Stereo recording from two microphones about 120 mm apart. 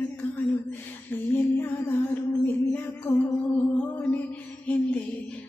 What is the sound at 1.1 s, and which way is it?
Music, 15° left (ahead or behind).